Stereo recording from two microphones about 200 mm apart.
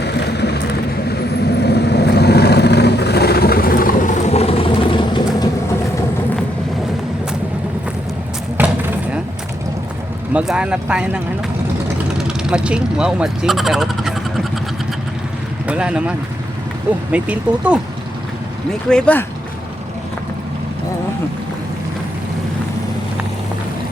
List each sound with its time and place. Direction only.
0.0 s vehicle: 55° left (ahead or behind); by 5.5 s 25° left (ahead or behind)
8.5 s a sound: 10° right (ahead or behind)
10.3 s speech: 5° right (ahead or behind)
15.6 s speech: 5° right (ahead or behind)
18.9 s speech: 5° left (ahead or behind)